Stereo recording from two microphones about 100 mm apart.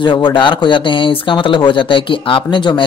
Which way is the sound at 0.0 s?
55° left (ahead or behind).